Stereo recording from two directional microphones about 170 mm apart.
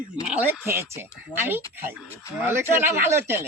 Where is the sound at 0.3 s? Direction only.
10° right (ahead or behind).